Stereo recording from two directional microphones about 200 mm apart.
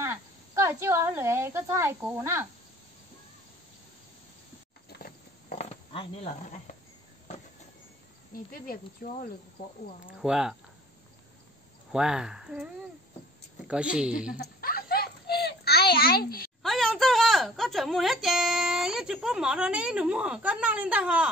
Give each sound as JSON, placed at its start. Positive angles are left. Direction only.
{"t": 0.7, "sound": "speech", "side_deg": -15}
{"t": 4.8, "sound": "a sound", "side_deg": 50}
{"t": 8.5, "sound": "speech", "side_deg": 45}
{"t": 10.0, "sound": "speech", "side_deg": -5}
{"t": 11.9, "sound": "speech", "side_deg": -5}
{"t": 14.4, "sound": "a sound", "side_deg": 50}
{"t": 16.6, "sound": "a woman's voice", "side_deg": 0}